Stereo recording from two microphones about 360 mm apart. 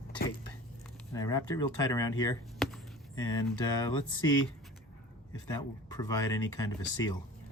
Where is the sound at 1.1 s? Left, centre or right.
Centre.